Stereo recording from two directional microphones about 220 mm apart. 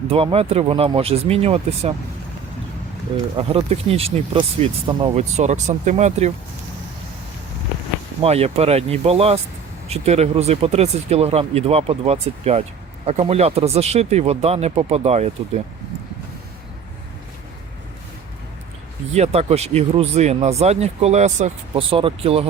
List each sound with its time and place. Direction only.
0.1 s speech: 25° right (ahead or behind)
3.3 s speech: 25° right (ahead or behind)
8.2 s speech: 30° right (ahead or behind)
19.1 s speech: 30° right (ahead or behind)